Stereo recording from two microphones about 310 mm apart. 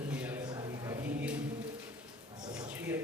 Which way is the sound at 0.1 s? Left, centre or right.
Centre.